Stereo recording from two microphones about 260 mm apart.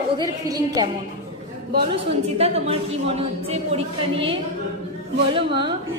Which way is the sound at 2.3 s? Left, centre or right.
Right.